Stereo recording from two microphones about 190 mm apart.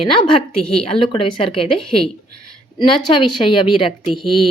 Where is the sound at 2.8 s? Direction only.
25° left (ahead or behind).